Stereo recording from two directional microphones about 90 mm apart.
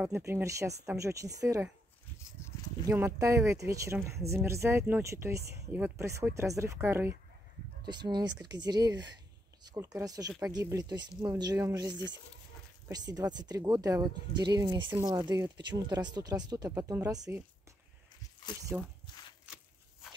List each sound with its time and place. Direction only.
0.1 s speech: 30° right (ahead or behind)
2.9 s speech: 25° right (ahead or behind)
3.2 s speech: 35° right (ahead or behind)
5.7 s speech: 20° right (ahead or behind)
6.3 s speech: 35° right (ahead or behind)
7.8 s speech: 50° right (ahead or behind)
14.9 s speech: 40° right (ahead or behind)
16.9 s speech: 20° right (ahead or behind)
18.7 s speech: 20° right (ahead or behind)
19.4 s a sound: 10° right (ahead or behind)